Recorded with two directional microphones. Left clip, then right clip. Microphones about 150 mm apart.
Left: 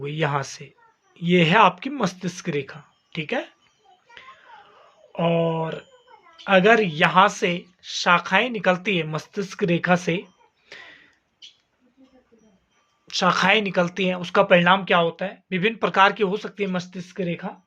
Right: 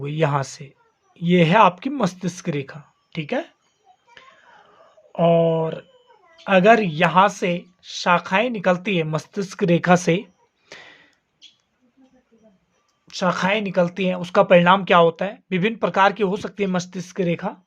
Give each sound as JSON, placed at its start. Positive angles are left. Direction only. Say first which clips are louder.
{"t": 0.0, "sound": "speech", "louder": "right 3 dB", "side_deg": -35}
{"t": 4.2, "sound": "a sound", "louder": "left 3 dB", "side_deg": -35}
{"t": 5.1, "sound": "speech", "louder": "right 5 dB", "side_deg": -35}
{"t": 10.7, "sound": "a sound", "louder": "even", "side_deg": -50}
{"t": 13.1, "sound": "speech", "louder": "left 2 dB", "side_deg": -10}
{"t": 13.8, "sound": "speech", "louder": "right 1 dB", "side_deg": -25}
{"t": 14.8, "sound": "speech", "louder": "right 5 dB", "side_deg": -60}
{"t": 15.8, "sound": "speech", "louder": "even", "side_deg": -25}